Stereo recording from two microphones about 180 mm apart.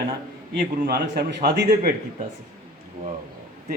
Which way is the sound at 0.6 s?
60° right (ahead or behind).